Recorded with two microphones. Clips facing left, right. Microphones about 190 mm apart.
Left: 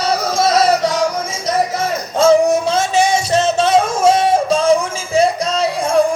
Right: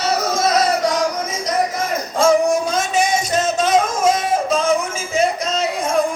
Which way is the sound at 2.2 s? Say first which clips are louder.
Left 4 dB; 25° left (ahead or behind).